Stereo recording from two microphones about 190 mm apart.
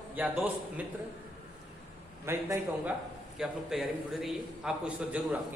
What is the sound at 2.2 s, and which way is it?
A man's voice, 15° right (ahead or behind).